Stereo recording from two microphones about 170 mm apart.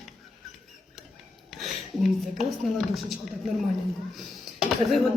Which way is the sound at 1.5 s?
Centre (ahead or behind).